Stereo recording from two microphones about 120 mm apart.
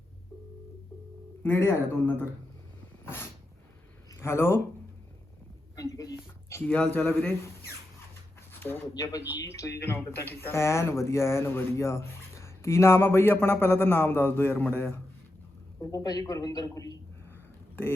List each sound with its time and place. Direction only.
1.5 s speech: 20° left (ahead or behind)
4.1 s speech: 20° left (ahead or behind)
5.7 s a sound: 30° left (ahead or behind)
6.7 s speech: 10° left (ahead or behind)
8.6 s speech: 15° left (ahead or behind)
15.8 s a man's voice: 30° left (ahead or behind)